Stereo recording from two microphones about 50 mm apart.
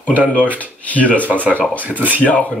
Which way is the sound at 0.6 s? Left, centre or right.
Left.